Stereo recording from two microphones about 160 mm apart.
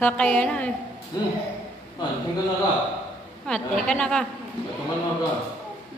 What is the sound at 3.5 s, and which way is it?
Speech, 5° left (ahead or behind).